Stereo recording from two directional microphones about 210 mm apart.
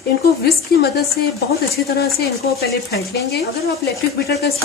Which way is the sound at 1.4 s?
45° left (ahead or behind).